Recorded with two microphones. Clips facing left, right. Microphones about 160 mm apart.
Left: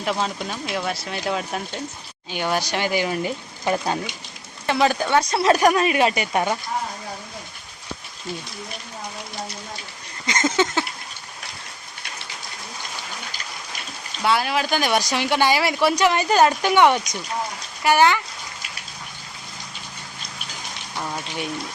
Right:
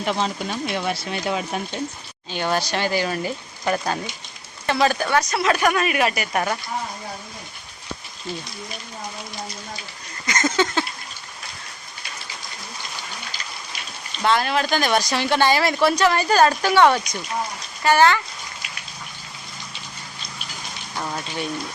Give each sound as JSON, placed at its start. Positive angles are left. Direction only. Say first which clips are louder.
{"t": 0.0, "sound": "speech", "louder": "right 1 dB", "side_deg": 0}
{"t": 2.3, "sound": "speech", "louder": "right 1 dB", "side_deg": 15}
{"t": 4.6, "sound": "speech", "louder": "even", "side_deg": 15}
{"t": 10.2, "sound": "a sound", "louder": "even", "side_deg": 25}
{"t": 14.2, "sound": "speech", "louder": "right 1 dB", "side_deg": 10}